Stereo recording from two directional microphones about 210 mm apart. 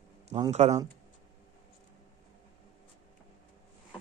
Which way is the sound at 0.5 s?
30° right (ahead or behind).